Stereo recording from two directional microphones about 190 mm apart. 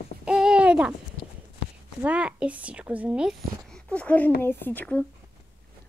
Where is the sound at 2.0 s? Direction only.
5° right (ahead or behind); by 5.0 s 10° left (ahead or behind).